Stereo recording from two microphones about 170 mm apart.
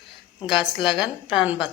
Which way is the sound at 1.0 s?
5° right (ahead or behind).